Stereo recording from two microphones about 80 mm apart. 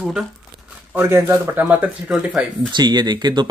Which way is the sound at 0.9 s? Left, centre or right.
Right.